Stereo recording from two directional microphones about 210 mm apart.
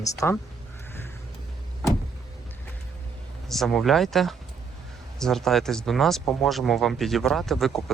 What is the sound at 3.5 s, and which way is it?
Speech, centre (ahead or behind).